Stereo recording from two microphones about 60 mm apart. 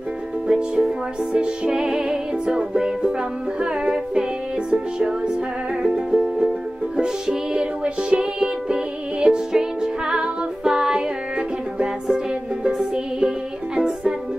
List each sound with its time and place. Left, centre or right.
0.5 s music: centre